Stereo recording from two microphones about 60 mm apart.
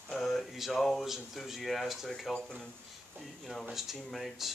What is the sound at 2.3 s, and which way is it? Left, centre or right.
Speech, centre.